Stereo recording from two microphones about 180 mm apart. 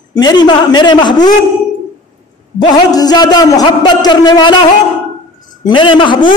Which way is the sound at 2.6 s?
20° left (ahead or behind).